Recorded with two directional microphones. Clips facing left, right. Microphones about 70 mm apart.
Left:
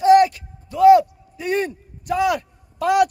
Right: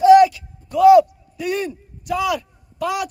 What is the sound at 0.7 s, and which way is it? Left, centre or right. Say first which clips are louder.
A man's voice: right 1 dB; left.